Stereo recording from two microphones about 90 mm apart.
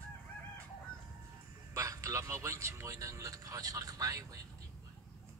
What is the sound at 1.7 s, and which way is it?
A man's voice, 35° right (ahead or behind).